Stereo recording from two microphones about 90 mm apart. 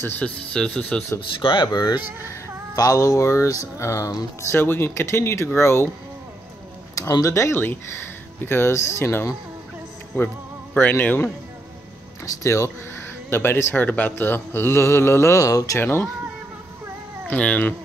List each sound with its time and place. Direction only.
0.2 s speech: 10° left (ahead or behind)
1.4 s speech: 60° left (ahead or behind)
2.2 s speech: 35° left (ahead or behind)
4.4 s speech: 30° left (ahead or behind)
7.0 s speech: 40° left (ahead or behind)
7.3 s speech: 30° left (ahead or behind)
12.4 s speech: 35° left (ahead or behind)
15.8 s speech: 25° left (ahead or behind)
17.3 s speech: 15° left (ahead or behind)